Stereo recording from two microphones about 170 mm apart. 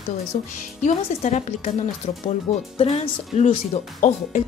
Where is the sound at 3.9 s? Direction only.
50° left (ahead or behind).